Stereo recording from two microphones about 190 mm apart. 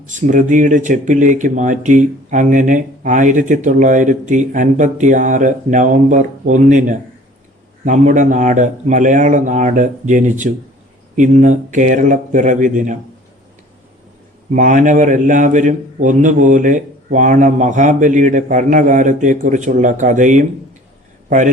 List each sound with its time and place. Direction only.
0.0 s speech: 40° right (ahead or behind)
14.5 s a man's voice: 40° right (ahead or behind)